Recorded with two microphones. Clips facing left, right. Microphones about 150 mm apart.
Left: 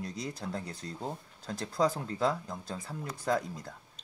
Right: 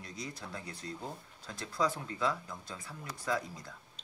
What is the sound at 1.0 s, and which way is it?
Speech, 30° left (ahead or behind).